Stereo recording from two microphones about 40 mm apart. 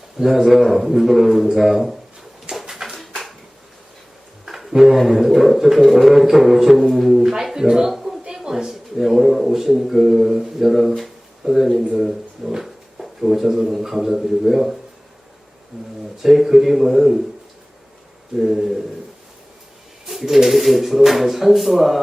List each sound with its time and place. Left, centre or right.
0.2 s a man's voice: centre
2.5 s a sound: centre
4.4 s a sound: centre
4.9 s a man's voice: centre
7.5 s a sound: centre
8.3 s a man's voice: centre
16.2 s speech: centre
18.3 s a man's voice: centre
20.1 s speech: centre